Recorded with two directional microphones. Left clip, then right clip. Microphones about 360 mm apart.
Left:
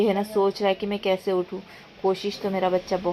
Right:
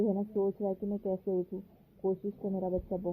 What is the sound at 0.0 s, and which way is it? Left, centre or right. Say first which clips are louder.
A woman's voice: left 10 dB; left.